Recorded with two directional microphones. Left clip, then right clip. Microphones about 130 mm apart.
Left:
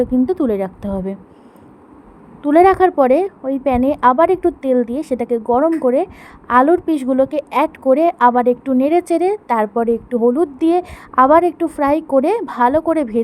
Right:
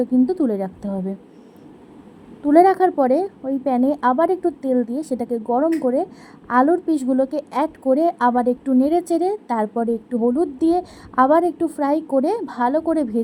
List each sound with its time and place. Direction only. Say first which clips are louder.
0.0 s a woman's voice: left 3 dB; 20° left (ahead or behind)
2.4 s a woman's voice: left 3 dB; 20° left (ahead or behind)